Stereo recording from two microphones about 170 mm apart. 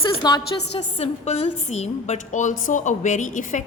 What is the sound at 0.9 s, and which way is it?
A woman's voice, 40° left (ahead or behind).